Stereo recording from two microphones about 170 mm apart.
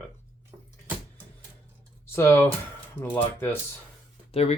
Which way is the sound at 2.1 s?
15° left (ahead or behind).